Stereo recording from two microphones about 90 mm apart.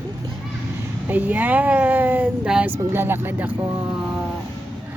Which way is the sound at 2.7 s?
25° right (ahead or behind).